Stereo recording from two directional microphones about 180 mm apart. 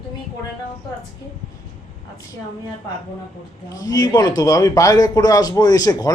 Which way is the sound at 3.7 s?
20° left (ahead or behind).